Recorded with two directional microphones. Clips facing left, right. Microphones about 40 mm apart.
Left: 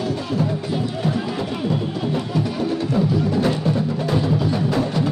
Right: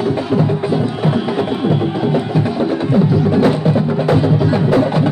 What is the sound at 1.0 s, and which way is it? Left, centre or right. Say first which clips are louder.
Music: right 7 dB; right.